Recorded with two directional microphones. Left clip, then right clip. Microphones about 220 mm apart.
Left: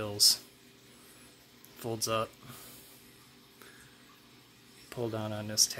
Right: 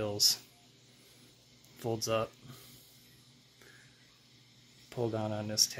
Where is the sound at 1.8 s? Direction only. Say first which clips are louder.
Even; centre (ahead or behind).